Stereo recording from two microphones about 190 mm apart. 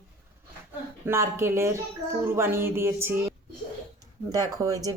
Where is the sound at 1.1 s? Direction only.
15° right (ahead or behind).